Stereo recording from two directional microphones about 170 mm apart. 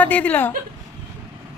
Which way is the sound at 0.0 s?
10° left (ahead or behind).